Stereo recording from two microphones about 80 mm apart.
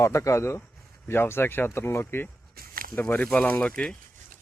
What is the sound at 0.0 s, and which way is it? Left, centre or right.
A man's voice, left.